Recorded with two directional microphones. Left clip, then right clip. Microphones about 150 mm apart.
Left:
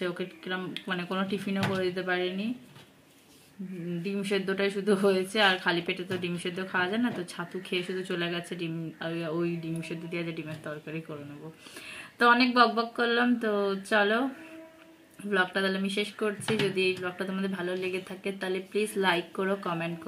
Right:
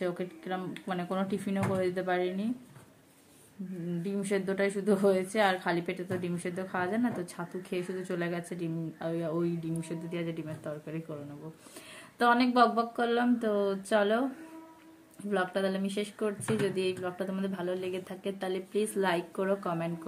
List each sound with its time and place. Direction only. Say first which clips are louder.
0.0 s a woman's voice: left 1 dB; 10° right (ahead or behind)
4.0 s a woman's voice: left 2 dB; 10° right (ahead or behind)
12.2 s a woman's voice: left 3 dB; 5° right (ahead or behind)
15.2 s speech: left 3 dB; 5° right (ahead or behind)